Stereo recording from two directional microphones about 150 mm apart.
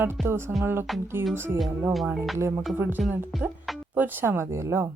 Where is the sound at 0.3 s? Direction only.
15° right (ahead or behind).